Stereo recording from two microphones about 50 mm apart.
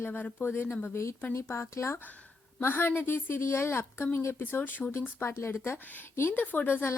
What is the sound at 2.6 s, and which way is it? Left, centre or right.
A woman's voice, left.